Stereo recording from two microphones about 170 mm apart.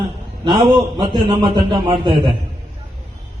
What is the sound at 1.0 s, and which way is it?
A man's voice, 25° right (ahead or behind).